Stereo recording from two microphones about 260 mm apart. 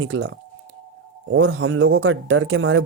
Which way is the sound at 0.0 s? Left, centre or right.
Right.